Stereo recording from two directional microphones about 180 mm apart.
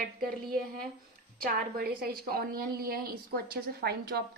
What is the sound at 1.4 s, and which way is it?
A woman's voice, 55° right (ahead or behind).